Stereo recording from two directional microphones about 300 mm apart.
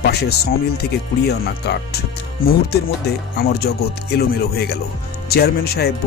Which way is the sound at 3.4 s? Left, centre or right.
Left.